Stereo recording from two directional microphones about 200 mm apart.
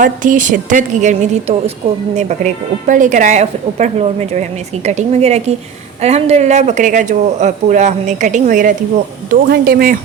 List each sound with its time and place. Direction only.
0.0 s speech: 40° right (ahead or behind)